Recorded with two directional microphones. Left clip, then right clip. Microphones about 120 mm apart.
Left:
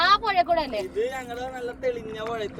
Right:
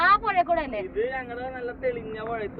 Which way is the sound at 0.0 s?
40° left (ahead or behind).